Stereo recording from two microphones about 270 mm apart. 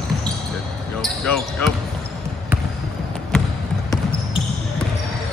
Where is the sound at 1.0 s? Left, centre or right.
Centre.